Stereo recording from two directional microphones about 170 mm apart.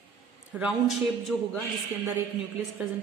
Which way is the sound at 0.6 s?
Centre (ahead or behind).